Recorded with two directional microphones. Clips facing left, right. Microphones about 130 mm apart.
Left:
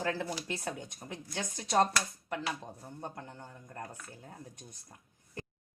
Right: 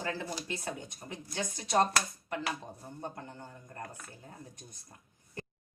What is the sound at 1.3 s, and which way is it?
Speech, centre (ahead or behind).